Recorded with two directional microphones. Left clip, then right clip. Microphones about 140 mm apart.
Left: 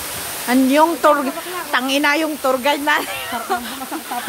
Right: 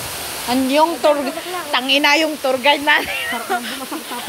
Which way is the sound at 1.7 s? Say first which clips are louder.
Right 2 dB; 40° left (ahead or behind).